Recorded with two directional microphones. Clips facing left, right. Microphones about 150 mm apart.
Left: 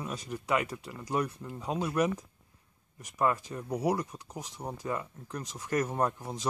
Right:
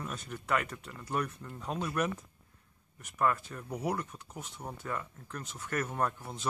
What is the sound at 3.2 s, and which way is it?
Speech, 20° left (ahead or behind).